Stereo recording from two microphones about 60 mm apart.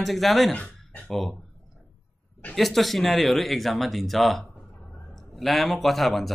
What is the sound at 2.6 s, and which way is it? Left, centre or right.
Speech, centre.